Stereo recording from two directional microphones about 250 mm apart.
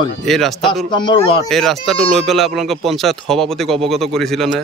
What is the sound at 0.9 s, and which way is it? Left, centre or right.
Speech, centre.